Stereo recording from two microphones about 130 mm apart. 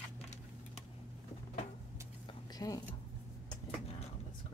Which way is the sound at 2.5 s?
30° left (ahead or behind).